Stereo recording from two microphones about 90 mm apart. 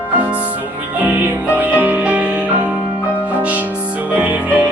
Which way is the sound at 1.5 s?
15° right (ahead or behind).